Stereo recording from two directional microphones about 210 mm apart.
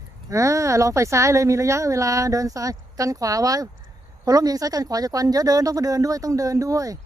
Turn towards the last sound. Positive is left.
turn(degrees=-15)  # may be behind; listen again after turning